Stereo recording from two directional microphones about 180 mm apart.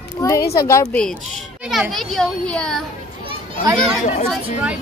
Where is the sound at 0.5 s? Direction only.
15° left (ahead or behind).